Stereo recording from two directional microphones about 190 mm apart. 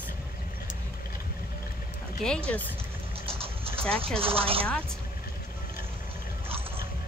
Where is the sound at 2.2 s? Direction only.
5° left (ahead or behind).